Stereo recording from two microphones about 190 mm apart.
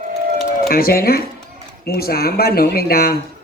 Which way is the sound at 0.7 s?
50° left (ahead or behind).